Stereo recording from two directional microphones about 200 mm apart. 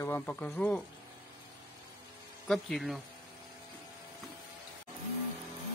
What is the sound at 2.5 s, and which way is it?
Speech, centre (ahead or behind).